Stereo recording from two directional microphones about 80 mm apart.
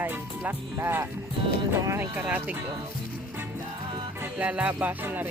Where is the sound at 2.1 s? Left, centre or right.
Centre.